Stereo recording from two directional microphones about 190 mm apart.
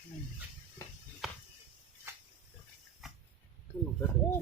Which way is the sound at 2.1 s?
15° right (ahead or behind).